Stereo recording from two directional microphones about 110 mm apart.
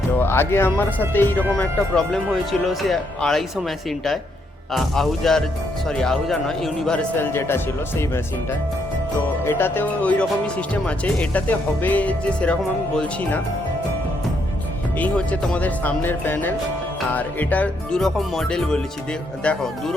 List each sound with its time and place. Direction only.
0.2 s speech: 20° left (ahead or behind)
1.5 s speech: 5° left (ahead or behind)
7.2 s speech: 20° left (ahead or behind)
9.4 s speech: 20° left (ahead or behind)
14.9 s speech: 15° left (ahead or behind)